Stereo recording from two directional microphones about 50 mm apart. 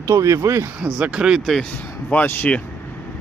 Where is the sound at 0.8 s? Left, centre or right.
Centre.